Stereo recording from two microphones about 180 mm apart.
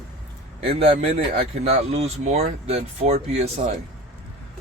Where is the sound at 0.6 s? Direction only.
30° right (ahead or behind).